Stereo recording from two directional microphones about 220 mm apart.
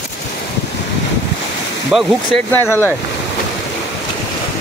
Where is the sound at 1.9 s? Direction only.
5° left (ahead or behind).